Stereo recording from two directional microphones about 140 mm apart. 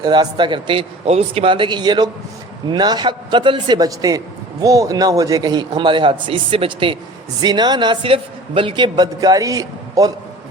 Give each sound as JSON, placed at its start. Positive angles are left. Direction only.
{"t": 0.0, "sound": "a man's voice", "side_deg": -30}